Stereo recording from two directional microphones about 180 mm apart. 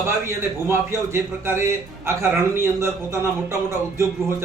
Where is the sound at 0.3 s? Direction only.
15° right (ahead or behind).